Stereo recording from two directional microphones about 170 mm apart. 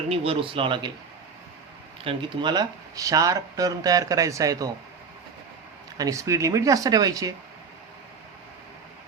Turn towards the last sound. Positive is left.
turn(degrees=-20)  # may be behind; listen again after turning